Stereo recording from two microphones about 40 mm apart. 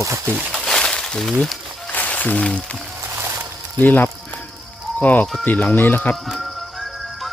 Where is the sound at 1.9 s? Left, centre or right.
Left.